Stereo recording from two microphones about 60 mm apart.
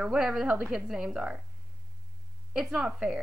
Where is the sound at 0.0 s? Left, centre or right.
Centre.